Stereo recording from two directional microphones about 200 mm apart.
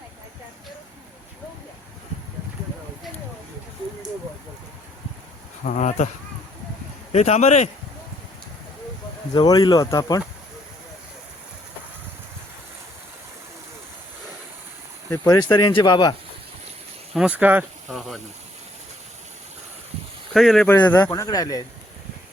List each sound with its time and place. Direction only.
5.6 s speech: 40° left (ahead or behind)
7.1 s speech: 35° left (ahead or behind)
9.3 s speech: 20° left (ahead or behind)
15.1 s speech: 15° left (ahead or behind)
17.2 s speech: 5° right (ahead or behind)
20.3 s speech: centre (ahead or behind)
20.9 s speech: 15° left (ahead or behind)